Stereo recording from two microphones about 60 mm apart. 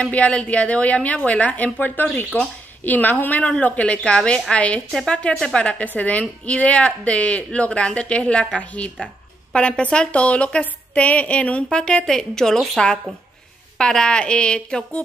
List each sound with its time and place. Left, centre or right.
0.0 s a woman's voice: left